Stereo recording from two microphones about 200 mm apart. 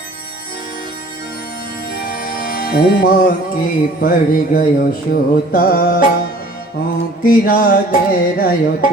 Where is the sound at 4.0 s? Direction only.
45° left (ahead or behind).